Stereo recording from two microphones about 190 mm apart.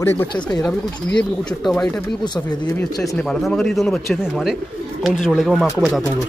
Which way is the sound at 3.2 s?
5° left (ahead or behind).